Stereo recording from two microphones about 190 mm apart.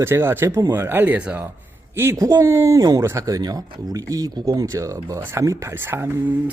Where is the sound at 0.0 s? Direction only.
10° right (ahead or behind).